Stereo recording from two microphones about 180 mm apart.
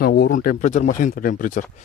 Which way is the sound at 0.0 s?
60° left (ahead or behind).